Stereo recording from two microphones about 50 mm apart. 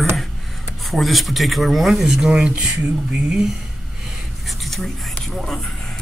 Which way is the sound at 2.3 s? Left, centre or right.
Right.